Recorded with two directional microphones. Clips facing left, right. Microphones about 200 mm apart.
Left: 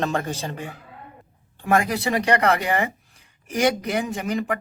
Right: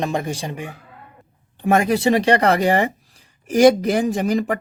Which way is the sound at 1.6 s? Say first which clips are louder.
Right 5 dB; 25° right (ahead or behind).